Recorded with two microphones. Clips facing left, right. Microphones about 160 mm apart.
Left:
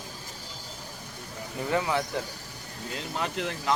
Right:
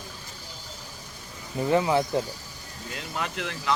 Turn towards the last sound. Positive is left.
turn(degrees=40)  # may be behind; listen again after turning